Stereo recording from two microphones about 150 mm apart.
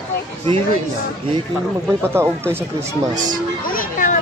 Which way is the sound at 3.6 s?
70° left (ahead or behind).